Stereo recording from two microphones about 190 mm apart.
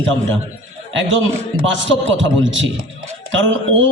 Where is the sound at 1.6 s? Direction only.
80° right.